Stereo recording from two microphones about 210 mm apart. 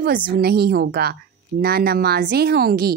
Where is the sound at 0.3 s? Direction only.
45° right (ahead or behind).